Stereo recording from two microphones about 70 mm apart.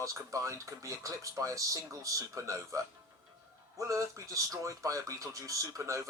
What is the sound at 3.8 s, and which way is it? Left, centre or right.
Speech, right.